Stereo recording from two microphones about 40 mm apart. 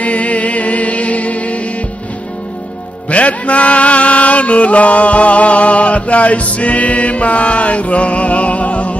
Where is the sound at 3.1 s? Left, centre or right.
Left.